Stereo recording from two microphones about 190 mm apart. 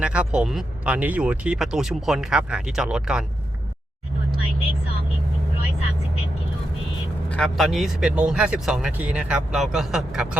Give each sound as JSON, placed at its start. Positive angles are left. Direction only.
{"t": 0.0, "sound": "speech", "side_deg": -5}
{"t": 7.3, "sound": "speech", "side_deg": 5}